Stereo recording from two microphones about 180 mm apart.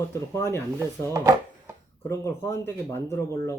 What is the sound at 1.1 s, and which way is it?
Chopping, 15° right (ahead or behind).